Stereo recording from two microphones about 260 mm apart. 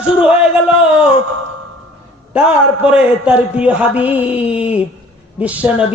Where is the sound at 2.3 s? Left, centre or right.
Centre.